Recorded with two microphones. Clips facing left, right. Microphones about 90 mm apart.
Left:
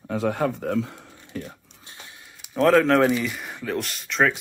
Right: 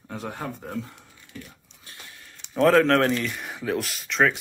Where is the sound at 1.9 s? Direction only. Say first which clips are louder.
Left 1 dB; 20° left (ahead or behind).